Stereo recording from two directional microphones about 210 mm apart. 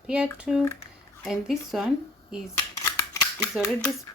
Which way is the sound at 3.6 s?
15° left (ahead or behind).